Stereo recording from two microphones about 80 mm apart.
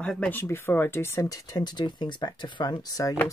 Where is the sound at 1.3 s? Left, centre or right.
Left.